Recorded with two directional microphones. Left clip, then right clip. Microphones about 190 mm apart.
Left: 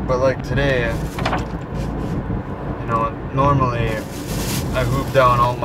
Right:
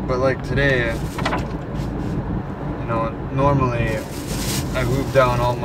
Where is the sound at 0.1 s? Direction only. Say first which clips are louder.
Left 2 dB; 15° left (ahead or behind).